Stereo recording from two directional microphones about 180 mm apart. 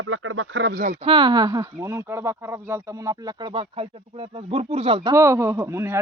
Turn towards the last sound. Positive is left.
turn(degrees=-15)  # may be behind; listen again after turning